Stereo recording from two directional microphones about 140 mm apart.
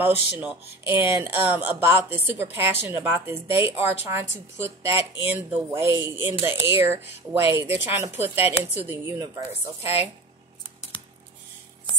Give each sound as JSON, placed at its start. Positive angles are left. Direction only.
{"t": 0.0, "sound": "speech", "side_deg": -10}